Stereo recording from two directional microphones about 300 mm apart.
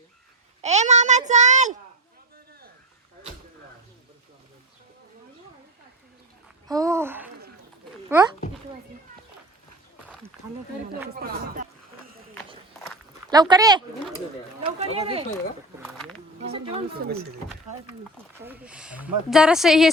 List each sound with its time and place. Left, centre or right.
0.6 s a child's voice: right
6.7 s speech: centre
11.1 s speech: right
13.3 s speech: centre
16.5 s speech: centre
16.9 s speech: right
18.4 s speech: centre